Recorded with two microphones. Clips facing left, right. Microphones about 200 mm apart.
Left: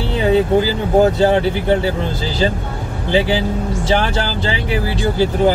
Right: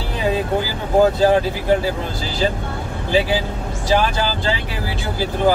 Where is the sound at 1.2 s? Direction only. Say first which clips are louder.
Left 2 dB; 25° left (ahead or behind).